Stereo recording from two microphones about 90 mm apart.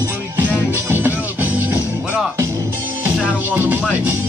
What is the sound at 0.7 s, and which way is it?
Music, 20° right (ahead or behind).